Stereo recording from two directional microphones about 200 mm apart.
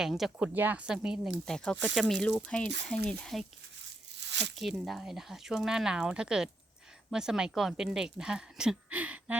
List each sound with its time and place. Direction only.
0.0 s a woman's voice: centre (ahead or behind)
4.2 s tearing: 60° right (ahead or behind)
4.5 s a woman's voice: centre (ahead or behind)